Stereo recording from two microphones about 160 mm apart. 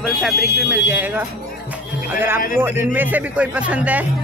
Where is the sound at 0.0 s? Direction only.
Centre (ahead or behind).